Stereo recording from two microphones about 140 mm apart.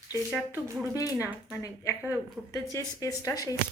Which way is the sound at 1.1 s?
15° right (ahead or behind).